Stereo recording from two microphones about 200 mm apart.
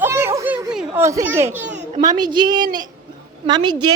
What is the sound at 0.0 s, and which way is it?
Children playing, 15° right (ahead or behind).